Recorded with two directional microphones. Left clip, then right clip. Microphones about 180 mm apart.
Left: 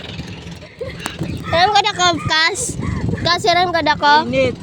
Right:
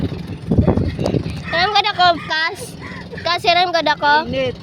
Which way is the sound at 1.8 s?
10° left (ahead or behind).